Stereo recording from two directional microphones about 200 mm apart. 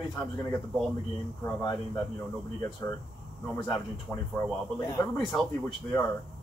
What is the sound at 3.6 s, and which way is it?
Speech, centre (ahead or behind).